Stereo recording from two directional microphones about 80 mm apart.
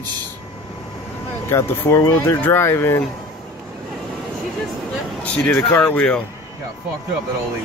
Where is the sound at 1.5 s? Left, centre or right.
Left.